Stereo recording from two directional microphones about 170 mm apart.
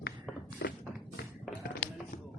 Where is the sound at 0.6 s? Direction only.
65° left (ahead or behind).